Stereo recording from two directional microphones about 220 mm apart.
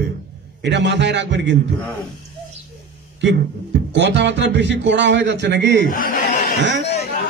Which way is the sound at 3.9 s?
50° right (ahead or behind).